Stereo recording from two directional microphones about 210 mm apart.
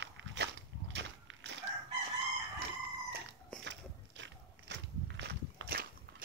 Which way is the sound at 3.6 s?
60° right (ahead or behind).